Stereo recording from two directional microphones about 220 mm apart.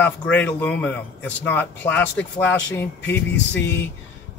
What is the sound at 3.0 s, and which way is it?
Speech, 50° left (ahead or behind).